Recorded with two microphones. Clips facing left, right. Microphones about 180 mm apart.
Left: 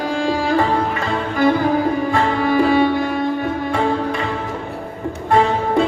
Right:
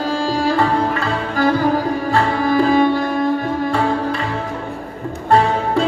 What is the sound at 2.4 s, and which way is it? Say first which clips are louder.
Sitar: right 1 dB; 40° right (ahead or behind).